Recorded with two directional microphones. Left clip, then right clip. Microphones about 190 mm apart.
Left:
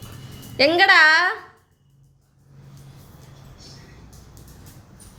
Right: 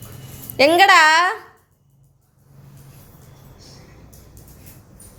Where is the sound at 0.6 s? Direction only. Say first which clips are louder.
Right 2 dB; 15° right (ahead or behind).